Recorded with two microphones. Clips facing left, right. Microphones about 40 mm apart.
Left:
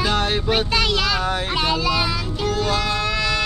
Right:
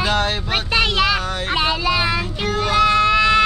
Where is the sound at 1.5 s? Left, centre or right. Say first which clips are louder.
Right 4 dB; centre.